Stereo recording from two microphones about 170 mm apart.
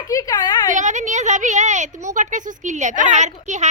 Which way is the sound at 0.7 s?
45° right (ahead or behind).